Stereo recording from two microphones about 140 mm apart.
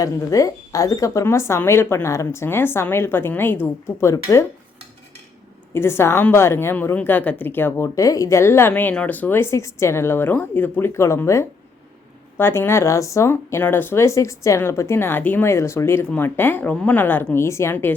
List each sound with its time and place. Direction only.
0.0 s speech: 25° left (ahead or behind)
4.1 s speech: 25° left (ahead or behind)
5.7 s a woman's voice: 20° left (ahead or behind)